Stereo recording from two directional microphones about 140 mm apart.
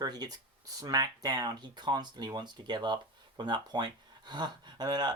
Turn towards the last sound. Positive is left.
turn(degrees=-30)  # may be behind; listen again after turning